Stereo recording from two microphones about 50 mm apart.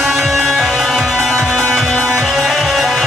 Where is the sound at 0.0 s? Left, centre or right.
Centre.